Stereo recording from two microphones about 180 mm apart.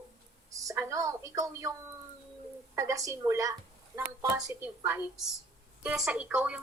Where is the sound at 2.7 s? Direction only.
15° right (ahead or behind).